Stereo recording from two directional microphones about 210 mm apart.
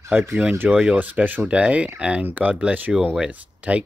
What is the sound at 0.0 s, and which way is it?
Speech, 10° right (ahead or behind).